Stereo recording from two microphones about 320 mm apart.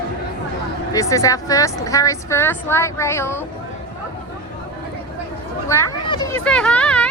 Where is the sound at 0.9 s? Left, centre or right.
Centre.